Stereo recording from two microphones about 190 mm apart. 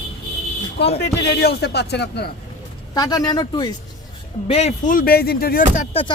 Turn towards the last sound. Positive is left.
turn(degrees=50)  # may be behind; listen again after turning